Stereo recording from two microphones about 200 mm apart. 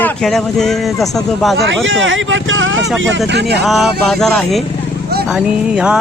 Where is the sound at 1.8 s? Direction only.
70° right (ahead or behind).